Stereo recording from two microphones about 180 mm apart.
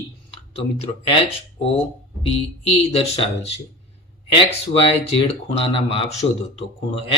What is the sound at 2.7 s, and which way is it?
Speech, 30° left (ahead or behind).